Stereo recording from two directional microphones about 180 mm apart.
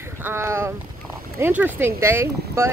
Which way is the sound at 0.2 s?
15° right (ahead or behind).